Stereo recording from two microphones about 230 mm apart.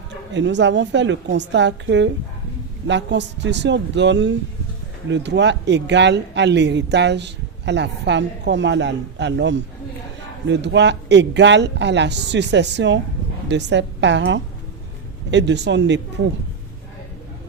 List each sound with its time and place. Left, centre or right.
0.3 s speech: right